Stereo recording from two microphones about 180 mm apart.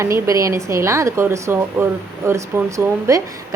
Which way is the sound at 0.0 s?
15° right (ahead or behind).